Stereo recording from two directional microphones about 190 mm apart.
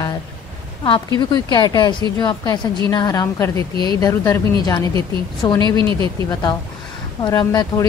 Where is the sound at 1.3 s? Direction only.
20° left (ahead or behind).